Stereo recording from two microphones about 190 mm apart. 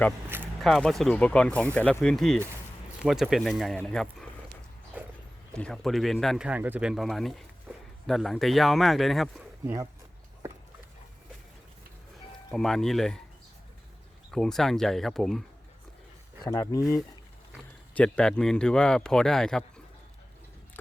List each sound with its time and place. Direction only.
0.6 s speech: centre (ahead or behind)
4.9 s horse: 5° right (ahead or behind)
5.5 s speech: 5° left (ahead or behind)
7.7 s a sound: 5° right (ahead or behind)
8.0 s speech: centre (ahead or behind)
12.5 s speech: centre (ahead or behind)
14.3 s speech: centre (ahead or behind)
16.4 s speech: 15° left (ahead or behind)
17.9 s speech: 5° left (ahead or behind)